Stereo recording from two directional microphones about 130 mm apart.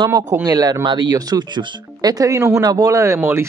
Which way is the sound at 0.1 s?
25° right (ahead or behind).